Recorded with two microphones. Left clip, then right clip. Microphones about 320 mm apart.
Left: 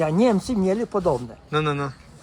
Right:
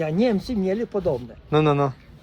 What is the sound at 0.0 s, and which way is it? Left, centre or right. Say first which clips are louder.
Speech: left 2 dB; left.